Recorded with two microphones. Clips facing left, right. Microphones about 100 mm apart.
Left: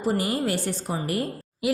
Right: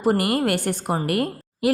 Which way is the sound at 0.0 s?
60° right (ahead or behind).